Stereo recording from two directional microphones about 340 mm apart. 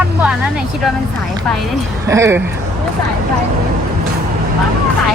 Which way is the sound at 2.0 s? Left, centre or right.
Centre.